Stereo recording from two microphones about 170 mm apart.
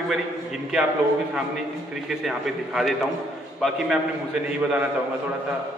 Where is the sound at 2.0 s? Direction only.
Centre (ahead or behind).